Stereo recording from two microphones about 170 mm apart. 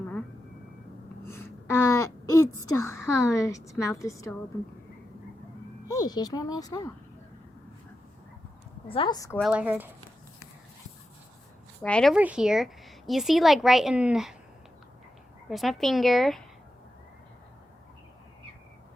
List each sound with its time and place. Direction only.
1.3 s a sound: 15° left (ahead or behind)
2.7 s a woman's voice: 15° left (ahead or behind)
5.9 s a woman's voice: 25° left (ahead or behind)
8.9 s speech: 30° left (ahead or behind)
9.1 s a woman's voice: 20° left (ahead or behind)
9.4 s speech: 10° right (ahead or behind)
11.8 s speech: 5° left (ahead or behind)
12.1 s speech: 5° right (ahead or behind)
15.4 s speech: centre (ahead or behind)